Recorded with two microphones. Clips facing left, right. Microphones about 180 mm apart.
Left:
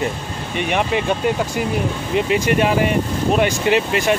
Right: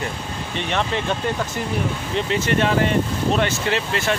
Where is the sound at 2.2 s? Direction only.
15° left (ahead or behind).